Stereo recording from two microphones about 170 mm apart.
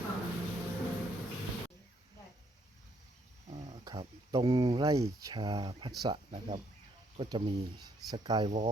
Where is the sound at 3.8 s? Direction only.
25° right (ahead or behind).